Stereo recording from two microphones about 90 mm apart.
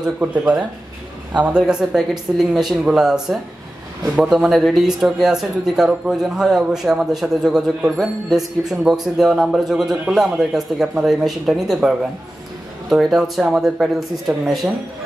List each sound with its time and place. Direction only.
0.0 s speech: 15° right (ahead or behind); by 14.7 s centre (ahead or behind)